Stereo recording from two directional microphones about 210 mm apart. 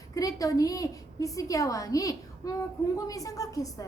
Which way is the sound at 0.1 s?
15° left (ahead or behind).